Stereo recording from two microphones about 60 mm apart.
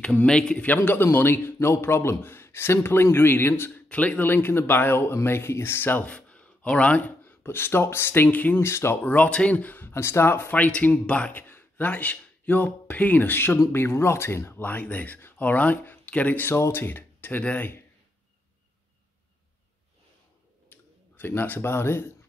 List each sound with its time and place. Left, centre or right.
0.0 s speech: centre
0.6 s a man's voice: left
3.9 s a man's voice: left
6.0 s speech: left
8.5 s speech: left
9.0 s a man's voice: left
10.5 s a man's voice: left
14.7 s a man's voice: left
20.7 s speech: left